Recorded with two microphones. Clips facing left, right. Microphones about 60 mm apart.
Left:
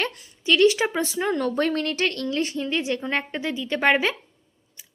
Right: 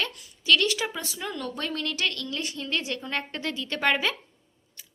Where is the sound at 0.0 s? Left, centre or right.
Left.